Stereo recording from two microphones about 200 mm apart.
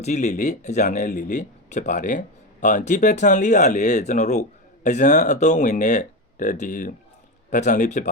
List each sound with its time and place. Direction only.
0.0 s speech: 35° left (ahead or behind)